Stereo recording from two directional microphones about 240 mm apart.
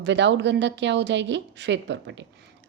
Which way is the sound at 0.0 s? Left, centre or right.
Right.